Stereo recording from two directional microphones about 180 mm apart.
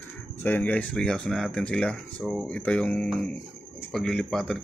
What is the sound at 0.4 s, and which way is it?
Speech, 10° left (ahead or behind).